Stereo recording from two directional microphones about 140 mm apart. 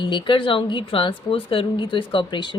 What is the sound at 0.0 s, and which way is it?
A woman's voice, 35° left (ahead or behind).